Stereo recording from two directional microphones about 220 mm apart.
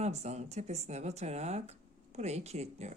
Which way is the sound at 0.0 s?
30° right (ahead or behind).